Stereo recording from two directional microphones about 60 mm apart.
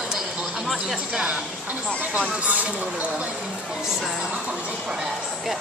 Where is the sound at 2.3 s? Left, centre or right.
Right.